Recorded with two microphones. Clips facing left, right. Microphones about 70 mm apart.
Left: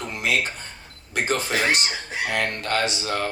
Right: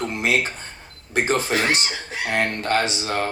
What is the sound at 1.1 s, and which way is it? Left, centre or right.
Speech, right.